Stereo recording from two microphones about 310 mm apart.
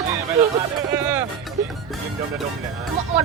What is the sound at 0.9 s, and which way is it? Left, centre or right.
Music, centre.